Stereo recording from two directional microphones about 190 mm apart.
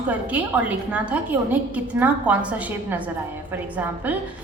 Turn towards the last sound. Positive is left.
turn(degrees=-10)  # may be behind; listen again after turning